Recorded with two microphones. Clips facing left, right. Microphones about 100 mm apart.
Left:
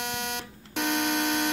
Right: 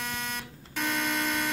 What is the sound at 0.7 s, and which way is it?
Alarm clock, 75° left (ahead or behind).